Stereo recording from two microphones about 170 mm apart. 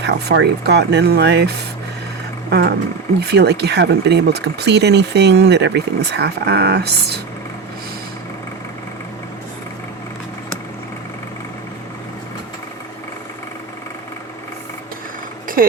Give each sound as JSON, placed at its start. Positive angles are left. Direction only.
{"t": 0.0, "sound": "speech", "side_deg": -80}